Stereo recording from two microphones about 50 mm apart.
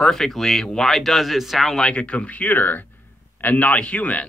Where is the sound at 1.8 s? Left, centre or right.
Left.